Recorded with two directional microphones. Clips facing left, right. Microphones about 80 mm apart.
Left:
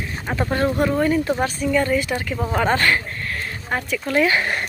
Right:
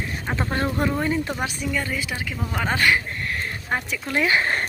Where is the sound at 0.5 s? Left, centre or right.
Right.